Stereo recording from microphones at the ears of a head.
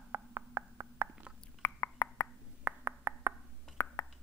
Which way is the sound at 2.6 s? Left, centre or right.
Right.